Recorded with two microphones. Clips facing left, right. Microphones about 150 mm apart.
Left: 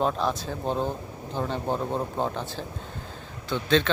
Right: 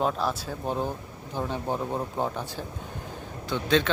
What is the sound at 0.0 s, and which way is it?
Speech, 5° right (ahead or behind).